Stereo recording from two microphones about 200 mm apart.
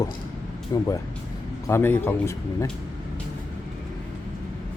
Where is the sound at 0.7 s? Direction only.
20° left (ahead or behind).